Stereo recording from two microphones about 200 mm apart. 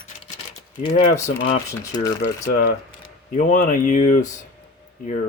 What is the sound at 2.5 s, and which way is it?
Speech, 45° left (ahead or behind).